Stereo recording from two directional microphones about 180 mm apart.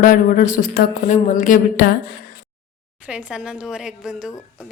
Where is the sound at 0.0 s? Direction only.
45° left (ahead or behind).